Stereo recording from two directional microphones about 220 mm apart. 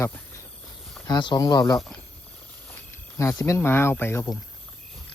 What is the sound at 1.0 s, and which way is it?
Speech, 20° left (ahead or behind).